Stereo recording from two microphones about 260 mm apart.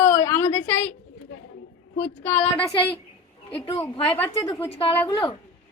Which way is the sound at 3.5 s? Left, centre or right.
Left.